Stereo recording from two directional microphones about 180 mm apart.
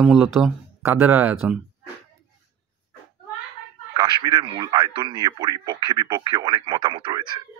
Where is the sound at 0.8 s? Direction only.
10° right (ahead or behind).